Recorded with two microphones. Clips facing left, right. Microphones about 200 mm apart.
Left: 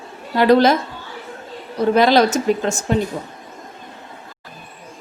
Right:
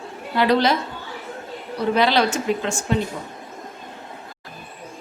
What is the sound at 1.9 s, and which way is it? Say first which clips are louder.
Speech: left 5 dB; 45° left (ahead or behind).